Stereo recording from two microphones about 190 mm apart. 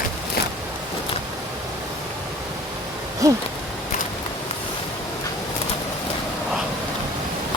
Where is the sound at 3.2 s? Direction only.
15° right (ahead or behind).